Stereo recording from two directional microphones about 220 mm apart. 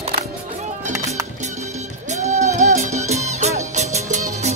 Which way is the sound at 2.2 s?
30° right (ahead or behind).